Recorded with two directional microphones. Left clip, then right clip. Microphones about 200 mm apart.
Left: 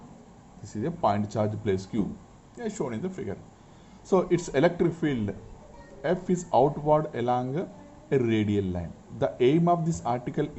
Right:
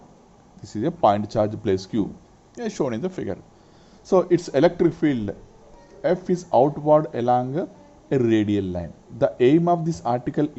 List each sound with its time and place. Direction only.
0.6 s a man's voice: 30° right (ahead or behind)
4.1 s a man's voice: 20° right (ahead or behind)